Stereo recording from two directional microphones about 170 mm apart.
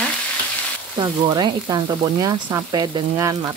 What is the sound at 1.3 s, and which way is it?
Frying, 25° right (ahead or behind).